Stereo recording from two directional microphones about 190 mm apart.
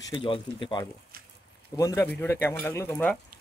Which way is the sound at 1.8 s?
15° left (ahead or behind).